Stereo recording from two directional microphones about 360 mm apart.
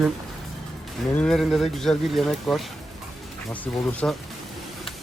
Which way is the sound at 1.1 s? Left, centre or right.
Centre.